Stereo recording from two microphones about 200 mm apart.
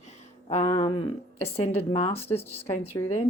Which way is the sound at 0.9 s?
30° left (ahead or behind).